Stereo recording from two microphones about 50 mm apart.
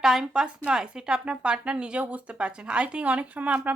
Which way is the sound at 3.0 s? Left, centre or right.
Right.